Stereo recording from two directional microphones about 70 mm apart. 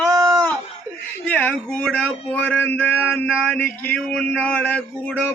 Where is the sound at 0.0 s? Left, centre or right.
Right.